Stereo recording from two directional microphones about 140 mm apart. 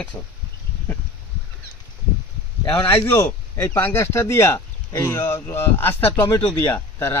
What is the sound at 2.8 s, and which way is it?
Speech, 15° left (ahead or behind).